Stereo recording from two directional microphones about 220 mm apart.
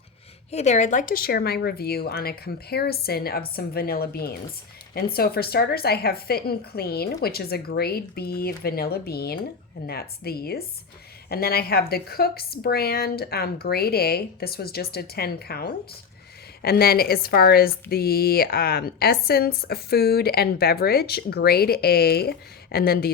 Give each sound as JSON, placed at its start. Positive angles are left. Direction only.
{"t": 0.5, "sound": "speech", "side_deg": 30}